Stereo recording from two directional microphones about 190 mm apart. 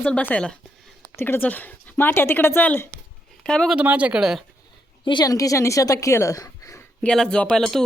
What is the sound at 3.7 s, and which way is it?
Speech, 5° right (ahead or behind).